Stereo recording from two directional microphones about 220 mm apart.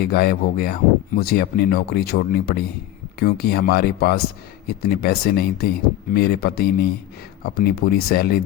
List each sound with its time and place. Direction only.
0.1 s speech: 45° left (ahead or behind)